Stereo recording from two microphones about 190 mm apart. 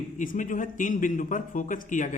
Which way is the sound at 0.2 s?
45° left (ahead or behind).